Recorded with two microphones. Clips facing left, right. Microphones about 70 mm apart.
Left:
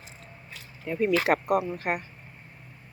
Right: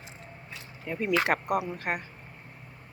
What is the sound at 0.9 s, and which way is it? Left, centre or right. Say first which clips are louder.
Speech: left 3 dB; centre.